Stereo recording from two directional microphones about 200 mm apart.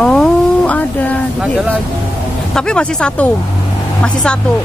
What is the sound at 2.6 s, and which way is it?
Speech, 5° left (ahead or behind).